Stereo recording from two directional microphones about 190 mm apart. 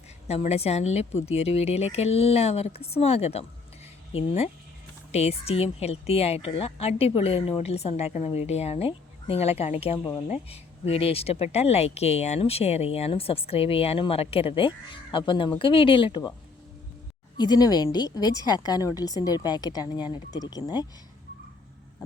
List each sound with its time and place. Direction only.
0.3 s speech: 35° left (ahead or behind)
5.1 s speech: 35° left (ahead or behind)
17.3 s a woman's voice: 20° left (ahead or behind)